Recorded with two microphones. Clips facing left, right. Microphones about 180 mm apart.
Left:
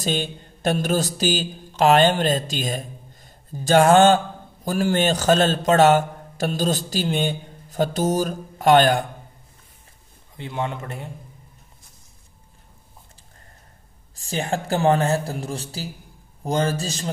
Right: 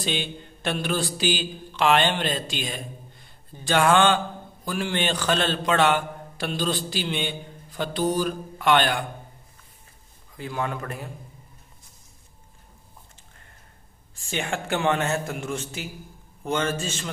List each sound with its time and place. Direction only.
0.0 s a man's voice: 40° left (ahead or behind)
10.3 s speech: 25° left (ahead or behind)
14.1 s speech: 35° left (ahead or behind)